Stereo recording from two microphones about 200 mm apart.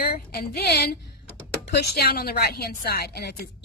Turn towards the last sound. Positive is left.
turn(degrees=50)  # may be behind; listen again after turning